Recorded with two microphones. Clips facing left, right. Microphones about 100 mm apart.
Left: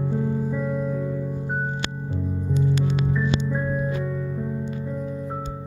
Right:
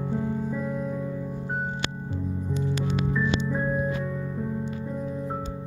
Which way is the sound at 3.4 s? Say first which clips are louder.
Left 1 dB; 25° right (ahead or behind).